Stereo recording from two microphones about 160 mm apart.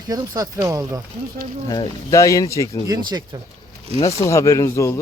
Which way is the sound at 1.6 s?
25° left (ahead or behind).